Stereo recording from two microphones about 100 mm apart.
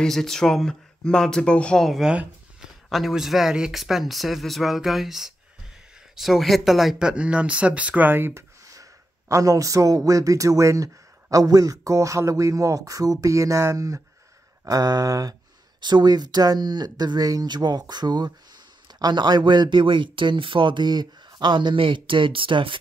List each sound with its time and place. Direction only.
0.0 s speech: 5° left (ahead or behind)
2.0 s speech: 5° right (ahead or behind)
9.3 s speech: 35° right (ahead or behind)
15.8 s speech: 45° right (ahead or behind)